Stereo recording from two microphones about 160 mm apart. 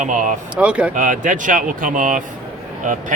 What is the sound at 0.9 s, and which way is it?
Speech, 55° right (ahead or behind).